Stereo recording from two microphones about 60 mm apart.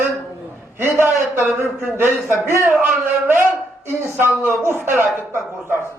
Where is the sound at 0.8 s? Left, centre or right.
Right.